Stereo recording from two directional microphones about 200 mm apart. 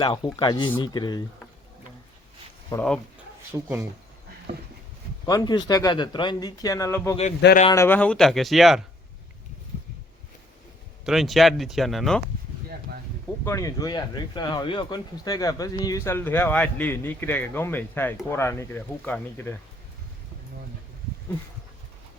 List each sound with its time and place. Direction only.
0.0 s speech: 25° left (ahead or behind)
2.6 s speech: 10° left (ahead or behind)
3.5 s speech: 10° right (ahead or behind)
5.2 s speech: 20° left (ahead or behind); by 8.8 s centre (ahead or behind)
11.0 s speech: centre (ahead or behind)
13.4 s speech: 15° left (ahead or behind)